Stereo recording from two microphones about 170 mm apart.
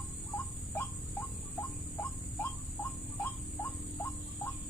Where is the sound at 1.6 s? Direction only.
10° left (ahead or behind).